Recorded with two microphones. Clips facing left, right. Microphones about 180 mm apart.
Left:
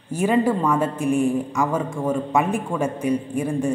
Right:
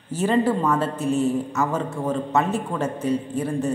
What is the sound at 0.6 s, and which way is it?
A woman's voice, 10° left (ahead or behind).